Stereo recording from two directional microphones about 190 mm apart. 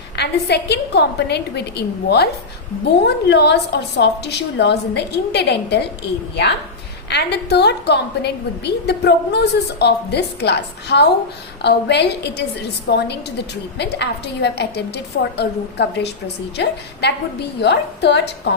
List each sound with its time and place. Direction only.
0.2 s a woman's voice: 60° left (ahead or behind)
7.1 s a woman's voice: 60° left (ahead or behind)